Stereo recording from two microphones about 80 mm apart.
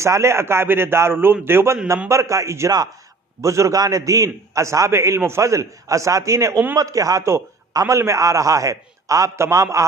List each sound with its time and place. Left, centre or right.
0.0 s a man's voice: right